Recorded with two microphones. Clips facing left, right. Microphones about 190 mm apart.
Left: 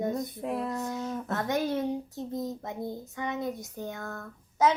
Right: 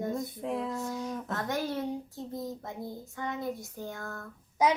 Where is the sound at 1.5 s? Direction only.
20° left (ahead or behind).